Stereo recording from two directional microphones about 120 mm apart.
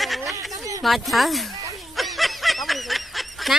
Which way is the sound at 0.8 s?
Centre (ahead or behind).